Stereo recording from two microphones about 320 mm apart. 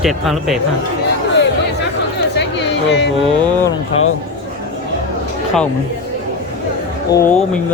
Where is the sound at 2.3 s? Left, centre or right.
Left.